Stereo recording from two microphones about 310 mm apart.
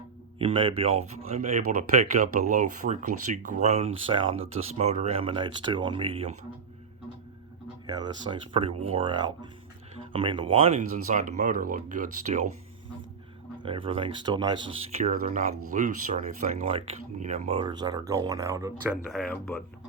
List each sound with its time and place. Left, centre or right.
0.3 s speech: centre
7.9 s speech: centre
13.6 s speech: centre
19.1 s speech: centre